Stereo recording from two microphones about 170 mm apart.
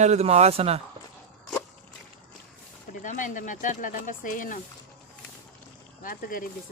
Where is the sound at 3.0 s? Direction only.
50° left (ahead or behind).